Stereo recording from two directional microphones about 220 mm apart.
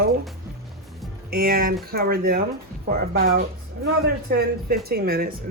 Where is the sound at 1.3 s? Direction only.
45° right (ahead or behind).